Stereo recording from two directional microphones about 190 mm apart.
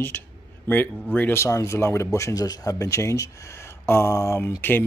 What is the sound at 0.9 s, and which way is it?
Speech, 5° left (ahead or behind).